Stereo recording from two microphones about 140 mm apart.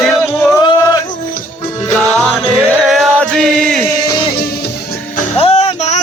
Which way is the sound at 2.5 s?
5° right (ahead or behind).